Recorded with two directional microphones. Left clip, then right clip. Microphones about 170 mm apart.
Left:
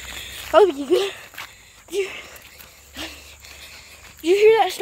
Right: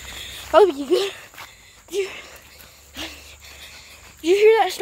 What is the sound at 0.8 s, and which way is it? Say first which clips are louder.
Speech: left 1 dB; 20° left (ahead or behind).